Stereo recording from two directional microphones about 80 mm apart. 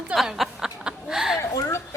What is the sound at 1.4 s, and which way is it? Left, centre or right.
Speech, left.